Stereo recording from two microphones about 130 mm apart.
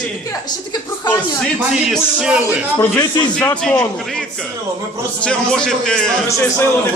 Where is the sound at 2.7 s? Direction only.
30° left (ahead or behind).